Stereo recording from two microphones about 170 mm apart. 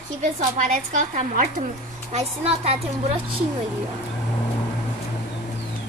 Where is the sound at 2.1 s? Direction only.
40° right (ahead or behind).